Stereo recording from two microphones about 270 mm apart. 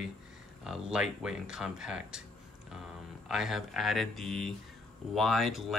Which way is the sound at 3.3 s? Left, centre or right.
Centre.